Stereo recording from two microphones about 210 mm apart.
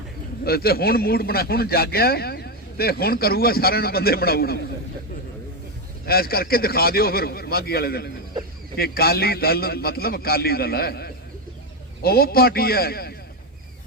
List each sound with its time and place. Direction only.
0.4 s a man's voice: 45° left (ahead or behind)
6.1 s a man's voice: 45° left (ahead or behind)